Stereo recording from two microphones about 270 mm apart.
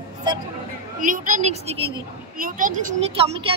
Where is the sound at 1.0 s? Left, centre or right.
Right.